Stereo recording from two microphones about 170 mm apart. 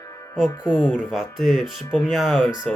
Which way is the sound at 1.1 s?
Centre (ahead or behind).